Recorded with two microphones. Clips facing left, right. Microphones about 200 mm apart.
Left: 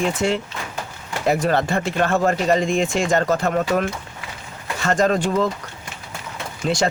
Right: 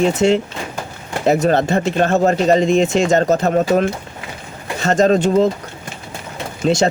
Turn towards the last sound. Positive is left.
turn(degrees=-25)  # may be behind; listen again after turning